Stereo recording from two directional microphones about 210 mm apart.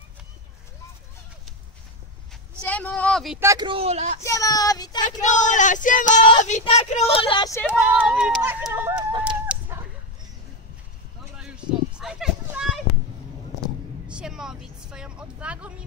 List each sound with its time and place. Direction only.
2.6 s a sound: 5° left (ahead or behind)
3.3 s speech: 15° right (ahead or behind); by 4.2 s 35° right (ahead or behind)
4.2 s speech: 15° left (ahead or behind)
5.2 s speech: 35° left (ahead or behind); by 7.6 s 20° left (ahead or behind)
7.6 s speech: 5° right (ahead or behind)
9.5 s dog: 5° right (ahead or behind)
11.3 s a sound: 5° right (ahead or behind)
14.0 s vehicle: 5° right (ahead or behind)